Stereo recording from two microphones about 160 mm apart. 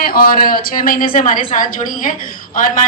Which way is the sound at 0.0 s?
65° left (ahead or behind).